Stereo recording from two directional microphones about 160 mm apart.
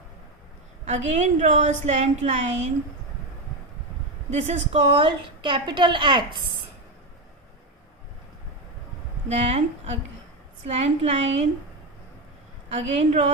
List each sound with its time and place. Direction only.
0.9 s a woman's voice: 50° right (ahead or behind)
4.3 s a woman's voice: 40° right (ahead or behind)
9.3 s a woman's voice: 40° right (ahead or behind)
12.7 s a woman's voice: 45° right (ahead or behind)